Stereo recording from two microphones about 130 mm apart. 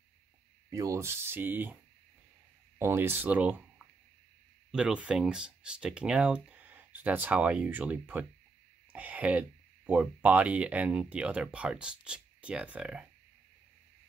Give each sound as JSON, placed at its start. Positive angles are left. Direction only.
{"t": 0.7, "sound": "speech", "side_deg": -25}
{"t": 2.8, "sound": "speech", "side_deg": -20}